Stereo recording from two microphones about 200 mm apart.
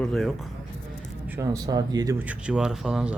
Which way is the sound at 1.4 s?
20° right (ahead or behind).